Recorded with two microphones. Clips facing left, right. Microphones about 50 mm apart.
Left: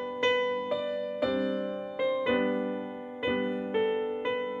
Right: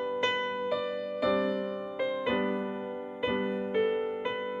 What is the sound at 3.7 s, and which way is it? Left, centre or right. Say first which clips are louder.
Music: even; centre.